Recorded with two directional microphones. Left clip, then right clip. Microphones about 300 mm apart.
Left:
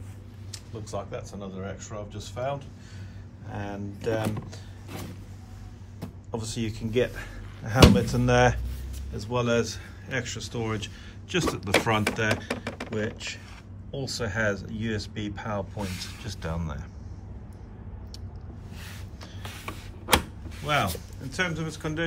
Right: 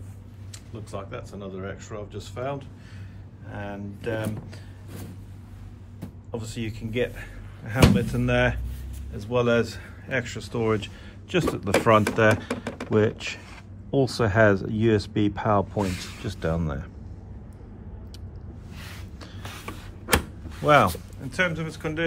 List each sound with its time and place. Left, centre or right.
0.9 s speech: centre
6.3 s speech: centre
12.9 s speech: centre
15.8 s speech: right
16.3 s speech: centre
19.6 s a sound: centre
20.5 s speech: centre